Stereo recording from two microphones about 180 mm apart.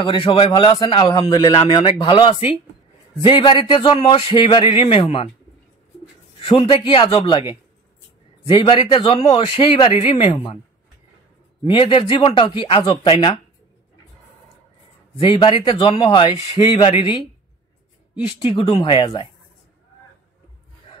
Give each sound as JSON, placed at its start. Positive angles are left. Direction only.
{"t": 0.0, "sound": "a man's voice", "side_deg": 30}
{"t": 6.4, "sound": "a man's voice", "side_deg": 30}
{"t": 8.5, "sound": "a man's voice", "side_deg": 30}
{"t": 11.6, "sound": "a man's voice", "side_deg": 30}
{"t": 15.1, "sound": "a man's voice", "side_deg": 30}
{"t": 18.4, "sound": "a man's voice", "side_deg": 30}